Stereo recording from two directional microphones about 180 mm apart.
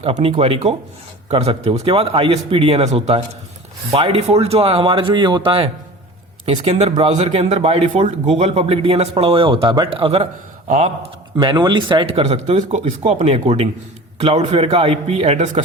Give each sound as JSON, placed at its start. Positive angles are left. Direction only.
{"t": 0.0, "sound": "speech", "side_deg": -35}
{"t": 10.7, "sound": "speech", "side_deg": -40}
{"t": 11.3, "sound": "speech", "side_deg": -25}